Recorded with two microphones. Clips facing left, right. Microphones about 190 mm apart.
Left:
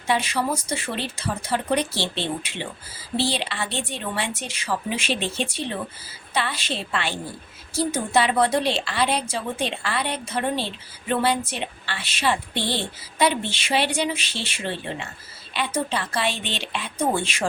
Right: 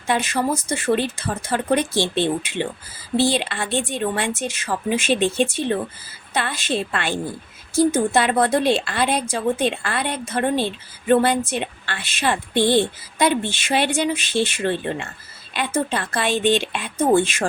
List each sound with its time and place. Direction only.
0.1 s a woman's voice: 50° right (ahead or behind)